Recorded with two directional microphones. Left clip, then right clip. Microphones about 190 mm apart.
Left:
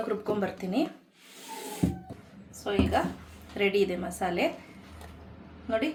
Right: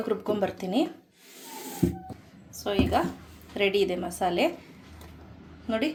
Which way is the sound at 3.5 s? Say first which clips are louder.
Right 1 dB; 30° right (ahead or behind).